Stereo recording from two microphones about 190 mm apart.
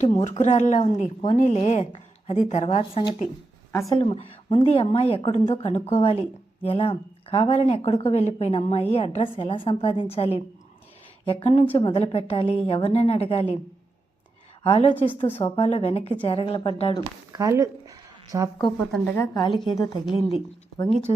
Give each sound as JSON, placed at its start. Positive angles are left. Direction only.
{"t": 0.0, "sound": "speech", "side_deg": 35}
{"t": 3.7, "sound": "speech", "side_deg": 15}
{"t": 3.9, "sound": "a woman's voice", "side_deg": 30}
{"t": 14.6, "sound": "a woman's voice", "side_deg": 30}
{"t": 17.3, "sound": "a sound", "side_deg": -15}
{"t": 18.6, "sound": "speech", "side_deg": 0}
{"t": 19.1, "sound": "a woman's voice", "side_deg": 20}